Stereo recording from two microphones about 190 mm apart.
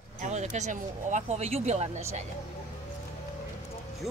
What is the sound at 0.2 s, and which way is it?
Speech, 40° right (ahead or behind).